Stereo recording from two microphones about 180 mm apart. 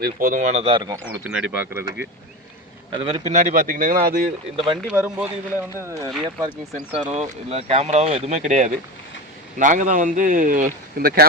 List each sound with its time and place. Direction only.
0.0 s speech: 50° right (ahead or behind); by 2.0 s 15° right (ahead or behind)
2.9 s a man's voice: 25° right (ahead or behind)
3.2 s speech: 45° right (ahead or behind)
4.5 s a man's voice: 25° right (ahead or behind)
4.9 s speech: 5° right (ahead or behind)
6.1 s speech: centre (ahead or behind)
6.9 s speech: 35° right (ahead or behind); by 11.3 s 55° right (ahead or behind)